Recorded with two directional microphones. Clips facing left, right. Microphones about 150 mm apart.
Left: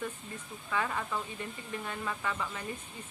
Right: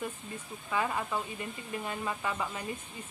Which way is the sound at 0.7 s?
10° right (ahead or behind).